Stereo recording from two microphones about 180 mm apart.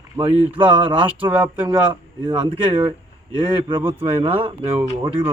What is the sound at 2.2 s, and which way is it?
Speech, 25° right (ahead or behind).